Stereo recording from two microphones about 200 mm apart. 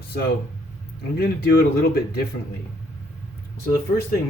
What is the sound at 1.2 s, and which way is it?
Speech, 50° left (ahead or behind).